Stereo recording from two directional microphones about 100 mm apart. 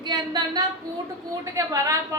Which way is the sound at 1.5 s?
35° right (ahead or behind).